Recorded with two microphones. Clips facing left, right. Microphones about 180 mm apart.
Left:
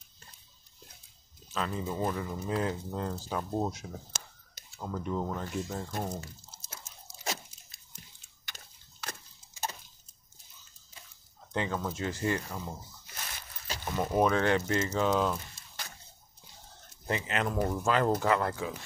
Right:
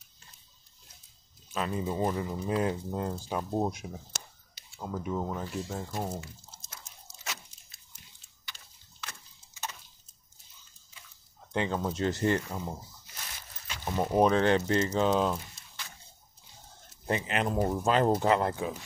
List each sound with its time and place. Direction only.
1.5 s speech: 15° right (ahead or behind)
8.5 s a sound: 45° left (ahead or behind)
11.5 s speech: 20° right (ahead or behind)
12.0 s speech: 35° right (ahead or behind)
13.8 s speech: 15° right (ahead or behind)
14.3 s speech: 25° right (ahead or behind)
17.0 s speech: 30° right (ahead or behind)